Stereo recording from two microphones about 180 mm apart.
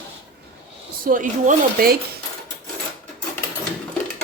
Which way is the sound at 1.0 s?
45° right (ahead or behind).